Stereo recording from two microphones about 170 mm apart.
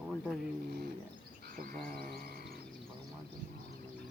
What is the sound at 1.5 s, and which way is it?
Frog, 60° right (ahead or behind).